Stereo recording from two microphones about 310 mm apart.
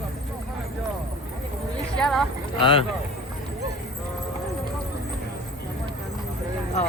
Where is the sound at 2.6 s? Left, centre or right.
Centre.